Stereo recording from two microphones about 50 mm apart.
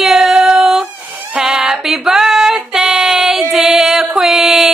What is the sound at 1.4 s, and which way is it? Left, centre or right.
Music, centre.